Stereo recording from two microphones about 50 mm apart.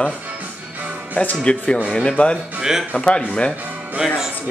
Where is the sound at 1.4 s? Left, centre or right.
Centre.